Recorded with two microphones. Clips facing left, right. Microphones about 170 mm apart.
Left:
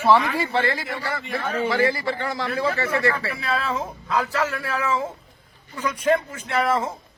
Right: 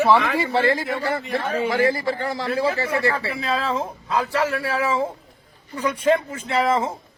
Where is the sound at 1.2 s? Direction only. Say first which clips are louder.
Right 2 dB; 35° right (ahead or behind).